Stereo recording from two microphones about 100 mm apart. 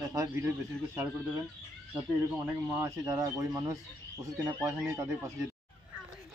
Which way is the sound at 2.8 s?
35° right (ahead or behind).